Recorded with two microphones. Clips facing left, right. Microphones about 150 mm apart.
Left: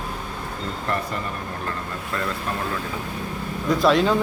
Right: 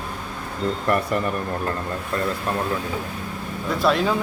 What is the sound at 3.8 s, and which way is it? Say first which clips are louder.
Speech: left 2 dB; centre (ahead or behind).